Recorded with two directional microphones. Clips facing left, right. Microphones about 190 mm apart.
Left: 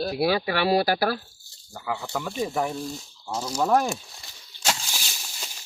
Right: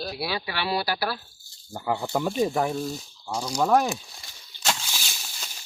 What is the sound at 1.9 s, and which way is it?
Speech, 20° right (ahead or behind).